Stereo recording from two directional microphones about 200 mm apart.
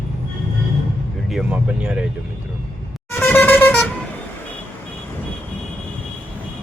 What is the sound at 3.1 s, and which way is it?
Vehicle, 10° left (ahead or behind).